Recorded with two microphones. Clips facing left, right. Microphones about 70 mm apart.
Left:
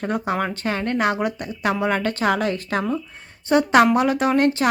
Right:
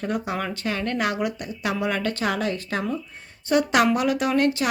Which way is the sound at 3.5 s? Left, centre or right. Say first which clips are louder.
Left 4 dB; left.